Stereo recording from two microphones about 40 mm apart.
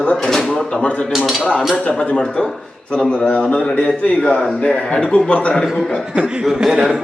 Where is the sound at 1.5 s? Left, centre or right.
Left.